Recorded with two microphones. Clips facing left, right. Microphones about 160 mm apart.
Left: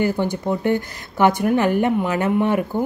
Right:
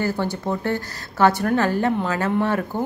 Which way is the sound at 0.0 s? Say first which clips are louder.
Left 3 dB; 15° left (ahead or behind).